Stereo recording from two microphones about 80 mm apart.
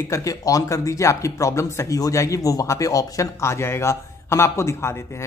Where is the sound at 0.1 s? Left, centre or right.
Left.